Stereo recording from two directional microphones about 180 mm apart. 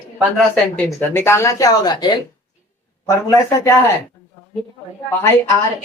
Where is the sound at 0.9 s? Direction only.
15° left (ahead or behind).